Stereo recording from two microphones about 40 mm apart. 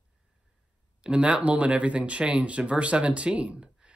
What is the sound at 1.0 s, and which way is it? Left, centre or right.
Speech, right.